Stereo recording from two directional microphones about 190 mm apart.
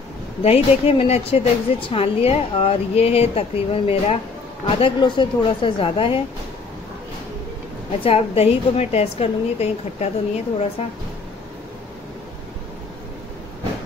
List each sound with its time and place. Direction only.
0.4 s a woman's voice: 30° left (ahead or behind)
8.0 s a woman's voice: 30° left (ahead or behind)